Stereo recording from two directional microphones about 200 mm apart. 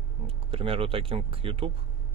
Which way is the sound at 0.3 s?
25° right (ahead or behind).